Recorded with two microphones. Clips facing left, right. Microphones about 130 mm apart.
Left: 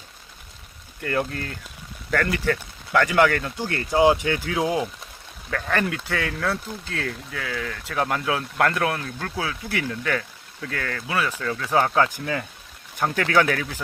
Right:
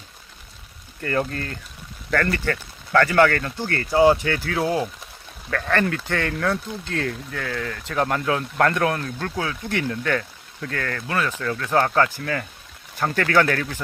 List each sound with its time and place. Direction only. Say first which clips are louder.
1.0 s speech: right 1 dB; 5° left (ahead or behind)